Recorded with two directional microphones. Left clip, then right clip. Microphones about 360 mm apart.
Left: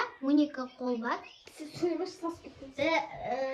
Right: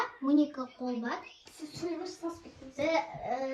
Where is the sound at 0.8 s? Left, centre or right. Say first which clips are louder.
Left 4 dB; centre.